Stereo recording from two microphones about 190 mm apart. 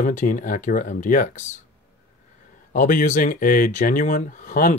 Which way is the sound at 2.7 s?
45° left (ahead or behind).